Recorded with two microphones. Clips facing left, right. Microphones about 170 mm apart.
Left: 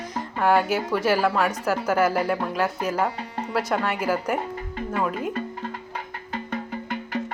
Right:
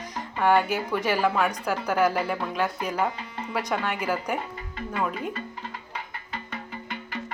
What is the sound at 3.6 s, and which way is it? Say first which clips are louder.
Speech: left 1 dB; 5° left (ahead or behind).